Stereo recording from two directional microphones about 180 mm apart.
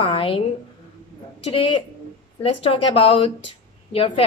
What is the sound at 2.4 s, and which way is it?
A woman's voice, 30° left (ahead or behind).